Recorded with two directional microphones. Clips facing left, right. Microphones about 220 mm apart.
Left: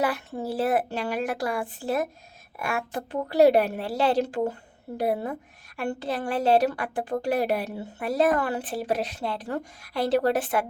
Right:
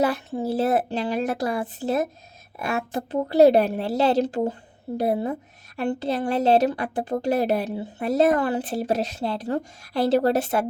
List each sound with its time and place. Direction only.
0.0 s a woman's voice: 25° right (ahead or behind)